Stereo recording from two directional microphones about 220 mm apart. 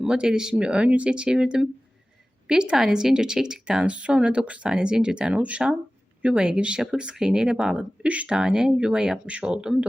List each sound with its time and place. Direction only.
0.0 s speech: 5° right (ahead or behind)